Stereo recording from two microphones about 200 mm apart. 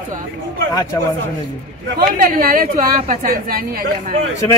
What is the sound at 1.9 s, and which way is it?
A woman's voice, 45° right (ahead or behind).